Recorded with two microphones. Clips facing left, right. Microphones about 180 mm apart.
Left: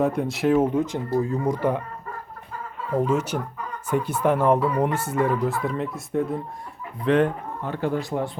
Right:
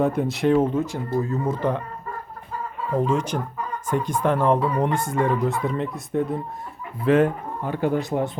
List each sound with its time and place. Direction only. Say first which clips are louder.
0.0 s speech: right 1 dB; centre (ahead or behind)
3.1 s speech: even; 10° left (ahead or behind); by 8.3 s 20° right (ahead or behind)